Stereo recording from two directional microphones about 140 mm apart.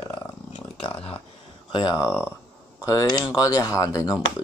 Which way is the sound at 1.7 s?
30° left (ahead or behind).